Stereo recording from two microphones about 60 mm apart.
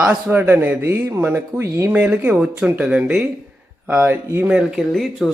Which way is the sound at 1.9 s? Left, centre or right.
Right.